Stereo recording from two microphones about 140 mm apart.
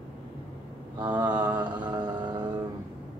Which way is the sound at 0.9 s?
30° right (ahead or behind).